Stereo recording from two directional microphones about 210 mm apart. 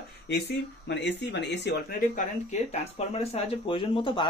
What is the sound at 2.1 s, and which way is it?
Speech, 30° left (ahead or behind).